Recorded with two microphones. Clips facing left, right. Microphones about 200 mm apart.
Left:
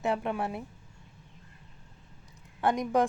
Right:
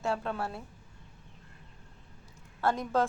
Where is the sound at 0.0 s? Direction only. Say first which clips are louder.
Left 3 dB; 15° left (ahead or behind).